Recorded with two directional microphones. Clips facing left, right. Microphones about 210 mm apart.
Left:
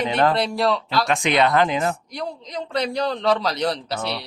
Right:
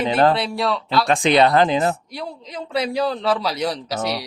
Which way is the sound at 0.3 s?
Centre (ahead or behind).